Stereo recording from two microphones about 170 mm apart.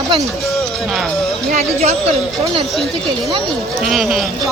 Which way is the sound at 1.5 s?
40° right (ahead or behind).